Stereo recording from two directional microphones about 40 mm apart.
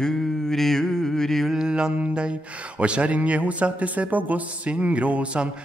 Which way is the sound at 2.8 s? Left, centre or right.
Right.